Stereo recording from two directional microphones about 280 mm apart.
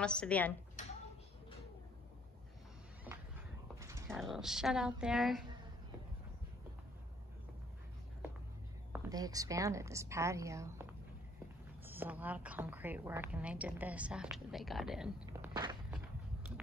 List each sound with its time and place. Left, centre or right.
0.0 s a woman's voice: centre
3.1 s a sound: centre
3.8 s dog: centre
4.2 s a woman's voice: centre
8.9 s a woman's voice: centre
15.5 s walk: centre